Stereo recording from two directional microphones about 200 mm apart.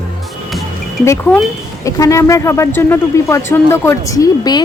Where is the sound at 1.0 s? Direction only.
15° left (ahead or behind).